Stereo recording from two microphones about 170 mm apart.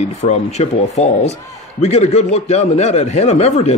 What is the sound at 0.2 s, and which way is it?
Speech, 40° left (ahead or behind).